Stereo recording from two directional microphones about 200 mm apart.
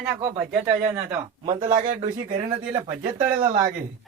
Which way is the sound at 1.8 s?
40° right (ahead or behind).